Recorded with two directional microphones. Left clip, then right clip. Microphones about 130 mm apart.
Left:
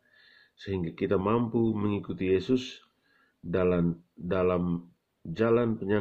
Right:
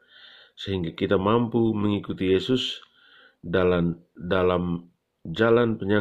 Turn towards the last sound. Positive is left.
turn(degrees=-30)  # may be behind; listen again after turning